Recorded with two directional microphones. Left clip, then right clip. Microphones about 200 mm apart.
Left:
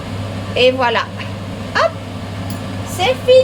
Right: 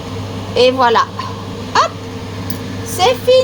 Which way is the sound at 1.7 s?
30° right (ahead or behind).